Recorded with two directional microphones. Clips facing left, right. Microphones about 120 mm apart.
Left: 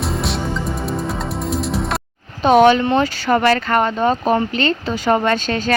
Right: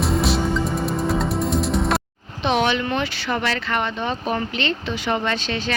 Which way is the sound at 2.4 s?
45° left (ahead or behind).